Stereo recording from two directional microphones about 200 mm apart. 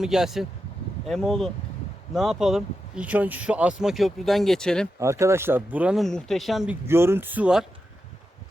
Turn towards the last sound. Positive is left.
turn(degrees=-5)  # may be behind; listen again after turning